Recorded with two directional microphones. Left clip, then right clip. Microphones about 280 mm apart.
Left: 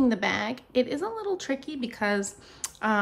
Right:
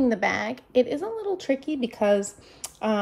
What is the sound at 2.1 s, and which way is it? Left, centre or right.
Speech, centre.